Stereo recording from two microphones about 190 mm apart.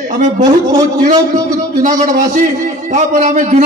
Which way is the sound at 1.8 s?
45° right (ahead or behind).